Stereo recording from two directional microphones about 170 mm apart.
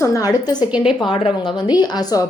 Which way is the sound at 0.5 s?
5° right (ahead or behind).